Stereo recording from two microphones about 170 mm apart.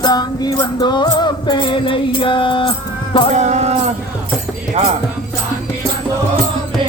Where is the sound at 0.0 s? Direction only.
25° left (ahead or behind).